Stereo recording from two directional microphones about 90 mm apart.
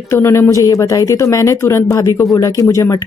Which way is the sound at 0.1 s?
30° left (ahead or behind).